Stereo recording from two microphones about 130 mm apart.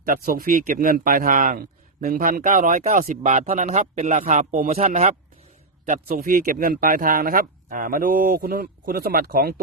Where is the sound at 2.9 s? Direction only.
75° right (ahead or behind); by 5.1 s 55° right (ahead or behind).